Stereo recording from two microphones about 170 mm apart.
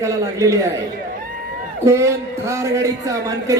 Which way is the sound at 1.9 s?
15° right (ahead or behind).